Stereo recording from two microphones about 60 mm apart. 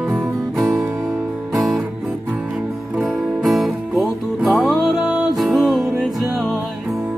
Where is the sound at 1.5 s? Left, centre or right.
Centre.